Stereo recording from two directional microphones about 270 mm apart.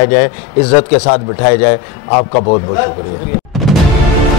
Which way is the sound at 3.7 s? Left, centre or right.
Centre.